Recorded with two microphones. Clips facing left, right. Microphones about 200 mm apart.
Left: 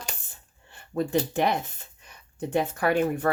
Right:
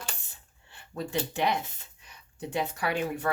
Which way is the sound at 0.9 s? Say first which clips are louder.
Left 6 dB; 50° left (ahead or behind).